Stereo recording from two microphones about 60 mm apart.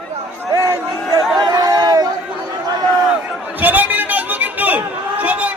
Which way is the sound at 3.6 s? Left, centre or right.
Right.